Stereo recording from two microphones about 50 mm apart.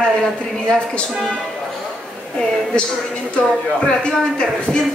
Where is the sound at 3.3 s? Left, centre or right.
Centre.